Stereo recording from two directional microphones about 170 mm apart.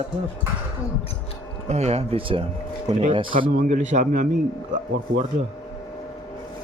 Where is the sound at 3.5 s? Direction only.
50° right (ahead or behind).